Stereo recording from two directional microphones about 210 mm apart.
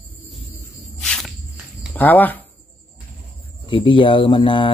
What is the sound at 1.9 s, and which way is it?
Speech, 10° left (ahead or behind).